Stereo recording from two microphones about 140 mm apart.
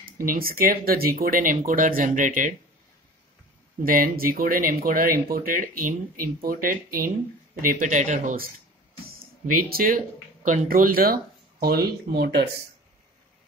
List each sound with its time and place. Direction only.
0.0 s speech: 85° right; by 2.5 s 70° right (ahead or behind)
3.8 s speech: 90° right
7.6 s speech: 75° right (ahead or behind); by 8.5 s 60° right (ahead or behind)
9.2 s speech: 90° right
10.4 s speech: 65° right (ahead or behind); by 12.2 s 90° right